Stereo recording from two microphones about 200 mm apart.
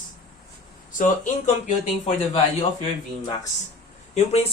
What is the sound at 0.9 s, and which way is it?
Speech, 40° left (ahead or behind).